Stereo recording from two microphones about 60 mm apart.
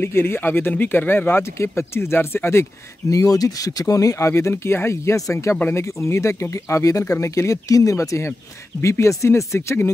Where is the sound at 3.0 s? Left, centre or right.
Left.